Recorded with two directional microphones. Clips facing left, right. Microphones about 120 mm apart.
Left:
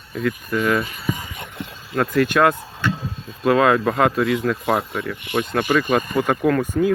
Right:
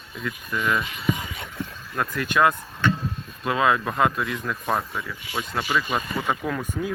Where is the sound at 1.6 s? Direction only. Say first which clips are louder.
Left 6 dB; 70° left (ahead or behind).